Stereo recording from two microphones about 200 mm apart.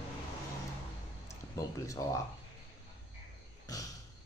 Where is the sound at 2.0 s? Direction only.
20° left (ahead or behind).